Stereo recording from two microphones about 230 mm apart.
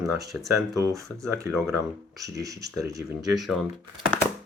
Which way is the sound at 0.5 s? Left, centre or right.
Centre.